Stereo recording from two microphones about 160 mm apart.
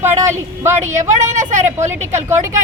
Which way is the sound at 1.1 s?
50° right (ahead or behind).